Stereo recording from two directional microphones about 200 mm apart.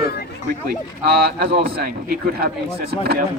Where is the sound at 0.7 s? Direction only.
50° right (ahead or behind).